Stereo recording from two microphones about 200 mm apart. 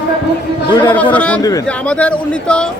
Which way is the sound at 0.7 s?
20° left (ahead or behind).